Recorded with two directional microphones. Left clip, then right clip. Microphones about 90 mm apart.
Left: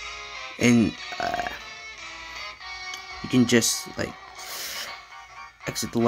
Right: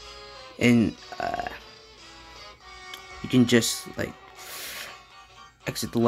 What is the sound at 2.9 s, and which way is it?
Speech, centre (ahead or behind).